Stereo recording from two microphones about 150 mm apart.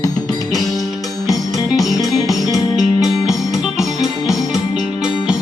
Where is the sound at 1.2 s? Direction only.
25° left (ahead or behind).